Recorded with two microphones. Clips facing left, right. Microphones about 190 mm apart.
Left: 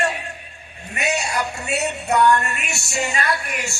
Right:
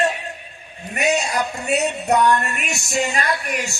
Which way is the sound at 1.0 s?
15° right (ahead or behind).